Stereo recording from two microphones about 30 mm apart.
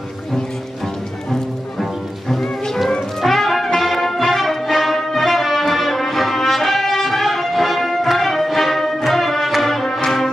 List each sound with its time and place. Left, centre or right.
1.8 s music: centre
9.8 s music: centre